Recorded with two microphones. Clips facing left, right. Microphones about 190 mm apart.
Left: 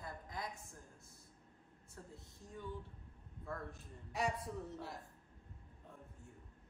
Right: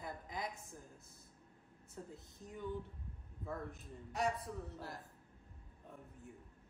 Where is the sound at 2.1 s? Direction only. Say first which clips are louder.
Right 2 dB; 20° right (ahead or behind).